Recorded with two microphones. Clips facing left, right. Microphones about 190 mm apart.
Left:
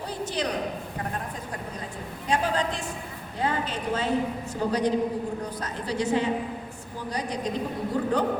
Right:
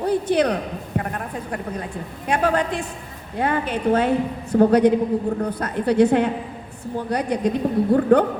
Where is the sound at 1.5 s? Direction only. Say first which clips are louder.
Right 7 dB; 60° right (ahead or behind).